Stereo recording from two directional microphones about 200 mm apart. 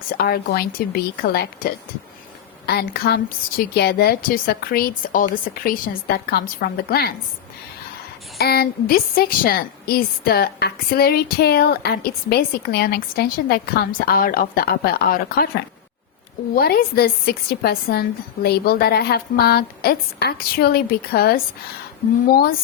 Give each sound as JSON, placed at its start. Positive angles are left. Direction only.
{"t": 0.1, "sound": "a woman's voice", "side_deg": 50}
{"t": 8.4, "sound": "a woman's voice", "side_deg": 50}